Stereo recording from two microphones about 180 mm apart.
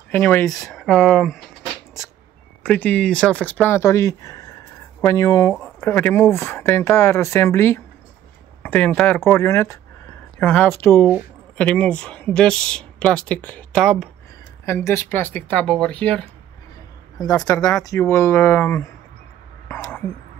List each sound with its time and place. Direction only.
0.1 s speech: 10° left (ahead or behind)
2.6 s speech: 10° left (ahead or behind)
5.5 s speech: 10° left (ahead or behind)
14.7 s speech: 15° left (ahead or behind)
17.2 s speech: 20° left (ahead or behind)